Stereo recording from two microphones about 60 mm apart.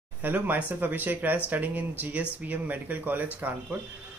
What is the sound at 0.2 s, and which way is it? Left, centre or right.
Speech, right.